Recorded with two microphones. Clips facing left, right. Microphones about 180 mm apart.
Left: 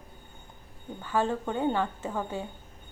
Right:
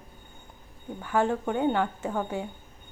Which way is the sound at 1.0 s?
15° right (ahead or behind).